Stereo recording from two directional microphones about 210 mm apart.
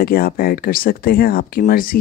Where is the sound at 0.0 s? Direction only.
45° left (ahead or behind).